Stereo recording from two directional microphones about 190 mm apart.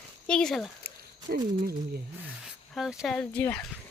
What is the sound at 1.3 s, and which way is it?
Speech, 50° right (ahead or behind).